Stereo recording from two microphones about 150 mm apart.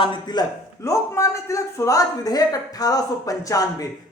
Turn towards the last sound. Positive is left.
turn(degrees=25)  # may be behind; listen again after turning